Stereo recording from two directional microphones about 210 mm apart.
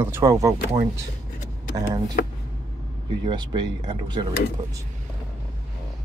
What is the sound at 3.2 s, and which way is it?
Speech, 20° right (ahead or behind).